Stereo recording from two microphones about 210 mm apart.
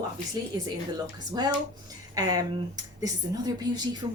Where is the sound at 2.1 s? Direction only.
20° right (ahead or behind).